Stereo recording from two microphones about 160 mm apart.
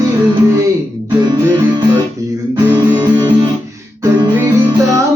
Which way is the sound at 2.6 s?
25° right (ahead or behind).